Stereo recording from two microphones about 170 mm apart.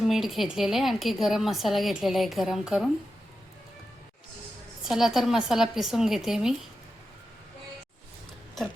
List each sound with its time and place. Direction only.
0.0 s a woman's voice: centre (ahead or behind)
4.9 s a woman's voice: centre (ahead or behind)